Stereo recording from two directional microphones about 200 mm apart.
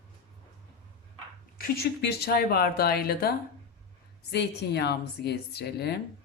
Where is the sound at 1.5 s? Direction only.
50° left (ahead or behind).